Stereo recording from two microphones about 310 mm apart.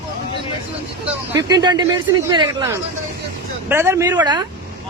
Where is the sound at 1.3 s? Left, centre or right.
Centre.